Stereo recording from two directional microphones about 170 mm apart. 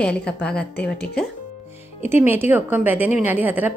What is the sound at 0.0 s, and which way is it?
A woman's voice, 5° left (ahead or behind).